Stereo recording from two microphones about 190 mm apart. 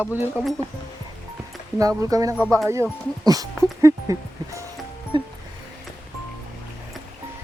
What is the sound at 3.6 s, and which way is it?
Music, 15° right (ahead or behind).